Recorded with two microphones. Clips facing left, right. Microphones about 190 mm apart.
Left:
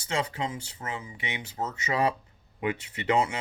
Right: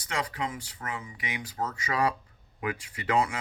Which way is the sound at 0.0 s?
25° left (ahead or behind).